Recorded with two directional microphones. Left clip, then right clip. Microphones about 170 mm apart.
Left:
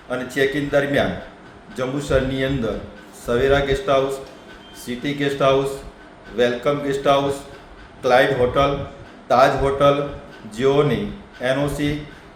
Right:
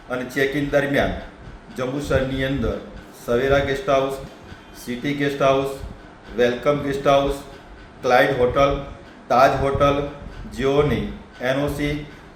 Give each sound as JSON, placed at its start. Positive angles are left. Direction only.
{"t": 0.1, "sound": "a man's voice", "side_deg": 10}